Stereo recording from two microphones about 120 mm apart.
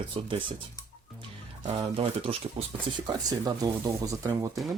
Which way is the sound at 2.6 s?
65° right (ahead or behind).